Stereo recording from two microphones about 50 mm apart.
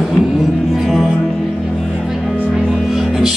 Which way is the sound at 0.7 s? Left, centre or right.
Centre.